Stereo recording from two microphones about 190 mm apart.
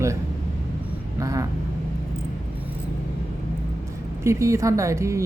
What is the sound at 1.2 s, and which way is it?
Vehicle, 15° right (ahead or behind).